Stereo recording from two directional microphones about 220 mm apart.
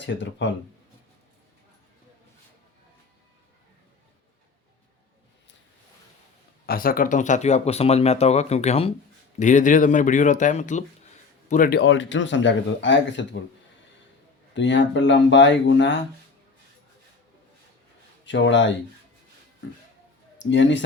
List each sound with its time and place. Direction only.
0.0 s speech: 55° left (ahead or behind)
6.7 s speech: 40° left (ahead or behind); by 13.2 s 55° left (ahead or behind)
14.5 s speech: 55° left (ahead or behind)
18.3 s speech: 55° left (ahead or behind)
20.4 s speech: 55° left (ahead or behind)